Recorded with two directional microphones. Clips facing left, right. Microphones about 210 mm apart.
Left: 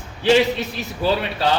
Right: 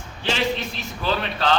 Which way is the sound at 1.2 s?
10° left (ahead or behind).